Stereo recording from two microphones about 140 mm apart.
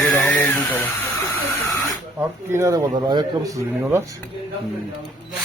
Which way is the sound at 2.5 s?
20° right (ahead or behind).